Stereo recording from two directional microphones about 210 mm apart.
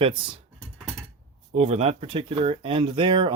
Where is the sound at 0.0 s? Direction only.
25° right (ahead or behind).